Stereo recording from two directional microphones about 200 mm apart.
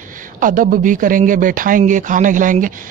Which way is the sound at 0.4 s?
40° right (ahead or behind).